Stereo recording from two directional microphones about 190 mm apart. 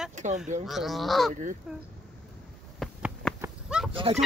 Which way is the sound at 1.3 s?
40° right (ahead or behind).